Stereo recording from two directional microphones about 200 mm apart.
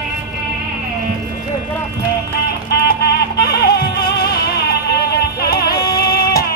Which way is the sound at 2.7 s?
55° left (ahead or behind).